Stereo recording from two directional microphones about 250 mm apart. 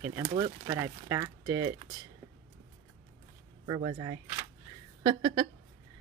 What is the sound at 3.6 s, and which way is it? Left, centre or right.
Speech, centre.